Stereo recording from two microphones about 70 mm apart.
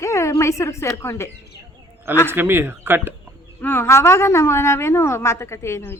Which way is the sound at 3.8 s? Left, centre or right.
Left.